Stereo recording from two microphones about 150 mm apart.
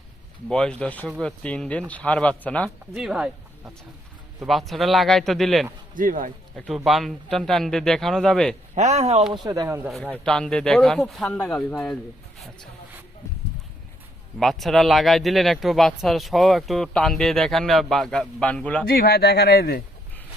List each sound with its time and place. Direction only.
0.4 s speech: 5° left (ahead or behind)
2.9 s speech: 5° right (ahead or behind)
5.9 s a man's voice: 65° right (ahead or behind)
6.6 s speech: centre (ahead or behind)
8.7 s speech: 50° right (ahead or behind)
9.3 s speech: 25° right (ahead or behind)
9.6 s speech: 15° right (ahead or behind)
9.9 s speech: 5° left (ahead or behind)
14.3 s speech: centre (ahead or behind)
18.9 s speech: 85° left